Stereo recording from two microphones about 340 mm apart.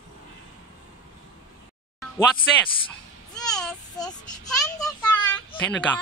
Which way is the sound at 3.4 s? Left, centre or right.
Centre.